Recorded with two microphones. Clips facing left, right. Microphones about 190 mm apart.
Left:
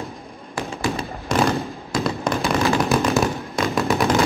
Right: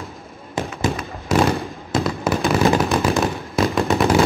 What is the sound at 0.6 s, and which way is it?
Fireworks, 20° right (ahead or behind).